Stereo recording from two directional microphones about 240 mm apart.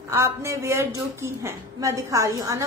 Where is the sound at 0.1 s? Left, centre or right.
Centre.